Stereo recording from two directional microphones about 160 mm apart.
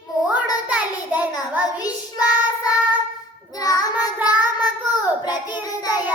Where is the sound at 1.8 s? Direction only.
25° left (ahead or behind).